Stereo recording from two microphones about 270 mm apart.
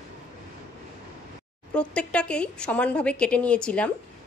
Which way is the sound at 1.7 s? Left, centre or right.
Centre.